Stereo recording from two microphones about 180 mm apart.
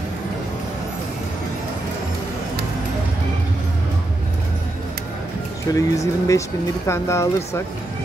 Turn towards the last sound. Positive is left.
turn(degrees=15)  # may be behind; listen again after turning